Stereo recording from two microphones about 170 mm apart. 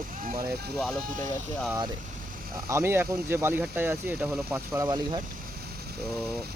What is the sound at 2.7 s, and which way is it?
Speech, 15° right (ahead or behind).